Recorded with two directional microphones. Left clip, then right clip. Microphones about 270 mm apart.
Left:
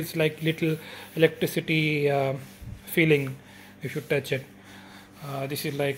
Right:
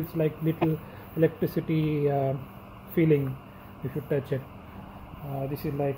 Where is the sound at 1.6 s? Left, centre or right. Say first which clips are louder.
Left 4 dB; left.